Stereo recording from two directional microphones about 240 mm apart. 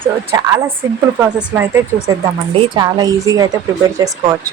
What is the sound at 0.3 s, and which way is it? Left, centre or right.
Speech, centre.